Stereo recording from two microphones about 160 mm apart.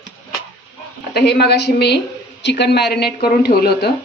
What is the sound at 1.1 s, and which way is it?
A woman's voice, 90° left.